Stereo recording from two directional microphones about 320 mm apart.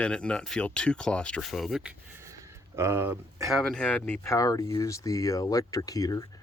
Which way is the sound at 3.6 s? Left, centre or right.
Centre.